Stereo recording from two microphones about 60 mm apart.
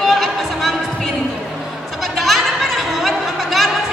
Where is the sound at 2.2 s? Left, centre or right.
Centre.